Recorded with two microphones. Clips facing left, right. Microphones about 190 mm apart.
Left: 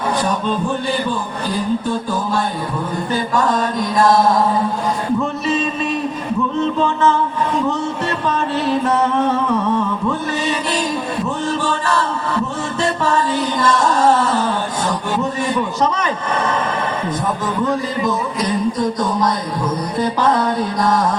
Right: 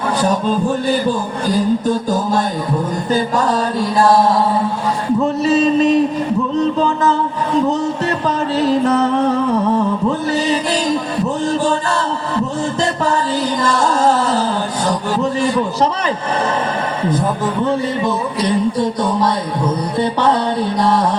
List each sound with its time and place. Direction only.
2.0 s speech: 40° right (ahead or behind)
5.5 s speech: 40° right (ahead or behind)
8.3 s speech: 35° right (ahead or behind)
10.1 s speech: 35° right (ahead or behind)
12.8 s a sound: 35° right (ahead or behind)
17.1 s speech: 30° right (ahead or behind)
20.0 s music: 30° right (ahead or behind)